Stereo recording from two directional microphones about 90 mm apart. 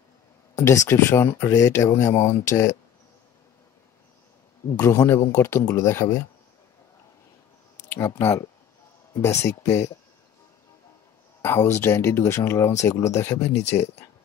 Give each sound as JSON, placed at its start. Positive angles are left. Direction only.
{"t": 0.6, "sound": "speech", "side_deg": 30}
{"t": 4.7, "sound": "speech", "side_deg": 30}
{"t": 8.2, "sound": "speech", "side_deg": 30}
{"t": 11.4, "sound": "speech", "side_deg": 30}